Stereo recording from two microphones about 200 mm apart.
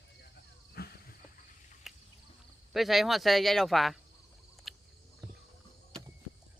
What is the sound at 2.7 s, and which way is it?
Speech, centre (ahead or behind).